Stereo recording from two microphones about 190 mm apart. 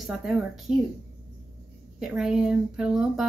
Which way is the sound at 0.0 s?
Centre (ahead or behind).